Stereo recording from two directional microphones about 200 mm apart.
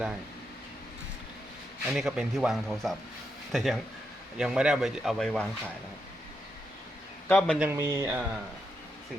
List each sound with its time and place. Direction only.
1.9 s speech: centre (ahead or behind)
7.3 s speech: 5° left (ahead or behind)
7.6 s speech: 10° right (ahead or behind)